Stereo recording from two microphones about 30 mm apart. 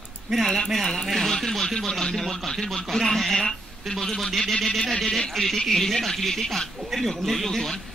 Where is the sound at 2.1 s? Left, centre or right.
Centre.